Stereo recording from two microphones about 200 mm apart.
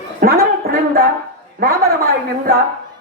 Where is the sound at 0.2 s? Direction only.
45° right (ahead or behind).